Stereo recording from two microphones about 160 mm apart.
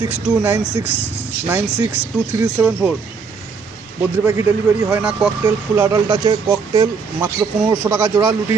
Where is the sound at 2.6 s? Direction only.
15° right (ahead or behind).